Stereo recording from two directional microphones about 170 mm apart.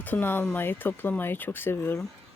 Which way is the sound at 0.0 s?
10° left (ahead or behind).